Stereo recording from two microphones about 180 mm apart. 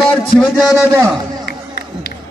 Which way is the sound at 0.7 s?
15° right (ahead or behind).